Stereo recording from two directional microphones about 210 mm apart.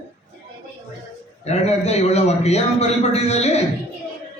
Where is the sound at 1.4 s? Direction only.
30° left (ahead or behind).